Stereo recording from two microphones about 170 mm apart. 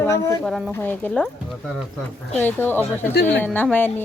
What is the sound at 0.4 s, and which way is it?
Speech, 5° left (ahead or behind).